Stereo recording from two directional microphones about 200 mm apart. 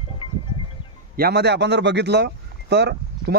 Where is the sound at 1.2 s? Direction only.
55° right (ahead or behind).